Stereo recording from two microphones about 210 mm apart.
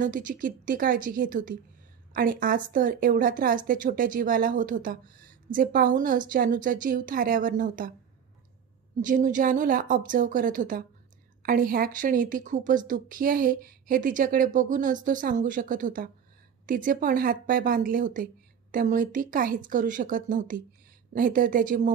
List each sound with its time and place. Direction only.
0.0 s speech: 40° right (ahead or behind)
9.0 s speech: 40° right (ahead or behind)